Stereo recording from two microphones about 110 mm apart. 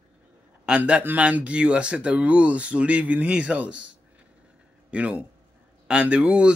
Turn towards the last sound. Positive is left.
turn(degrees=-10)  # may be behind; listen again after turning